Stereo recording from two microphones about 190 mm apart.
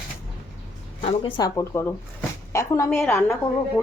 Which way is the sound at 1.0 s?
25° left (ahead or behind).